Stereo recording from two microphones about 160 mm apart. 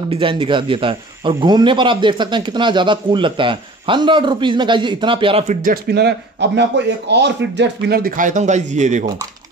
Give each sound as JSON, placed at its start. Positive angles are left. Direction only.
{"t": 0.1, "sound": "speech", "side_deg": -30}
{"t": 5.5, "sound": "a man's voice", "side_deg": -60}